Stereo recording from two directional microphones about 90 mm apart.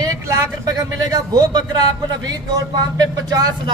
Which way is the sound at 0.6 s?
40° right (ahead or behind).